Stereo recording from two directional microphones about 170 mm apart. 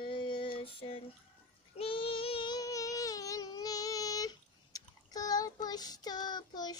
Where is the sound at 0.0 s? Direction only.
30° left (ahead or behind).